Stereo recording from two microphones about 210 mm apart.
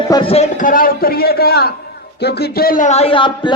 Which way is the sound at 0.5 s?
40° left (ahead or behind).